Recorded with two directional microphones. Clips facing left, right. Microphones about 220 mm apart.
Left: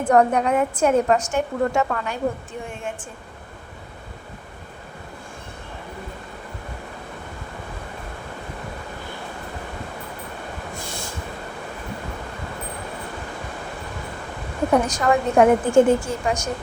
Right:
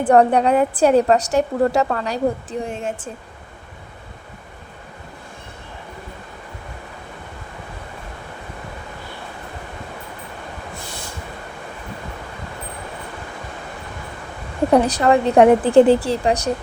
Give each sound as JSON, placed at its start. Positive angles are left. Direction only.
{"t": 0.0, "sound": "a woman's voice", "side_deg": -35}
{"t": 14.7, "sound": "a woman's voice", "side_deg": -35}